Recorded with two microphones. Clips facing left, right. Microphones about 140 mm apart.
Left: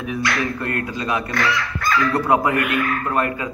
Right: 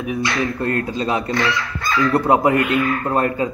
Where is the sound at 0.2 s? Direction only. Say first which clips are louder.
Right 1 dB; 25° right (ahead or behind).